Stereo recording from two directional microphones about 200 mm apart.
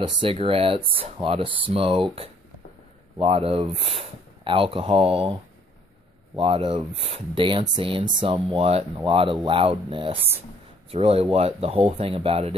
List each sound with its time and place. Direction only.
0.0 s speech: 25° right (ahead or behind)
3.2 s speech: 30° right (ahead or behind)